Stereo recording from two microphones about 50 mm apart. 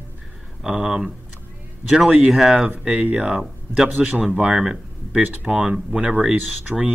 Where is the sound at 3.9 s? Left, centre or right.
Right.